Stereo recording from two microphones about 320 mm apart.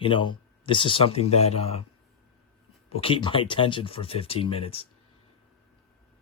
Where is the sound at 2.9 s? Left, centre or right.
Centre.